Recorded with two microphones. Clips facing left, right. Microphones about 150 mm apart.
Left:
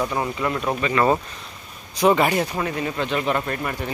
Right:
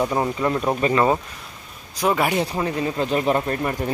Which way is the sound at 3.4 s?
25° right (ahead or behind).